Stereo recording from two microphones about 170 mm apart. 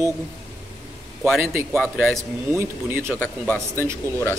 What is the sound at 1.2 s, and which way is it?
Speech, centre (ahead or behind).